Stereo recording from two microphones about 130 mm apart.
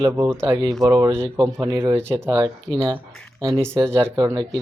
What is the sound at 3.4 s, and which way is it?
Speech, 35° right (ahead or behind).